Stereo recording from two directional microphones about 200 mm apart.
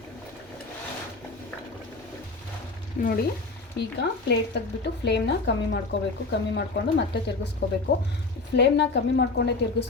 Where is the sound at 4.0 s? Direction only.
55° left (ahead or behind).